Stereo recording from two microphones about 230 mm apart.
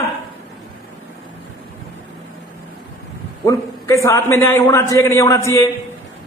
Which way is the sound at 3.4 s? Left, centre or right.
Centre.